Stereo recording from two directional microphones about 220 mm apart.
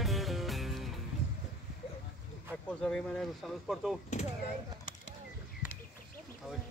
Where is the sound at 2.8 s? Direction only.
Centre (ahead or behind).